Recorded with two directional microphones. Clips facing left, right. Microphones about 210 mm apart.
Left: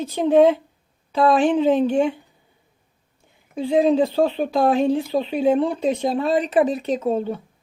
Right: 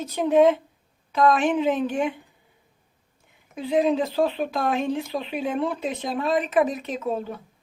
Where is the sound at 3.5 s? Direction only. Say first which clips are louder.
Left 4 dB; 30° left (ahead or behind).